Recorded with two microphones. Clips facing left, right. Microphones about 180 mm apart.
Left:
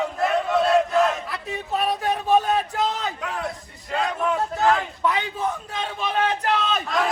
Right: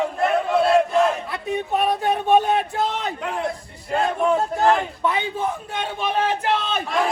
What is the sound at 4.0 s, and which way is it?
A man's voice, 30° right (ahead or behind).